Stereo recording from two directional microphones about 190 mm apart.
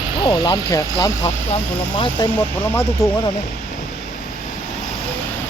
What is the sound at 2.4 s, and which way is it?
Speech, 15° left (ahead or behind).